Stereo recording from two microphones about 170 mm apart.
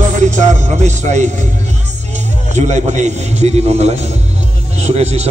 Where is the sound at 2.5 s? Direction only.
45° right (ahead or behind).